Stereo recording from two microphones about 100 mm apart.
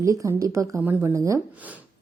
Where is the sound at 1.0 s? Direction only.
30° right (ahead or behind).